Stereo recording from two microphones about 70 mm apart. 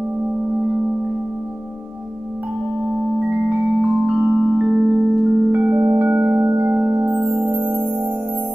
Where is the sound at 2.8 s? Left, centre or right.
Right.